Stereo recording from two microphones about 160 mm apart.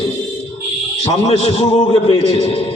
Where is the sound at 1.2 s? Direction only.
40° left (ahead or behind).